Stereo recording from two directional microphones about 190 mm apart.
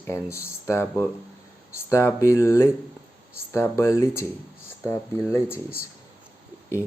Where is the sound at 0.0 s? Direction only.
15° left (ahead or behind).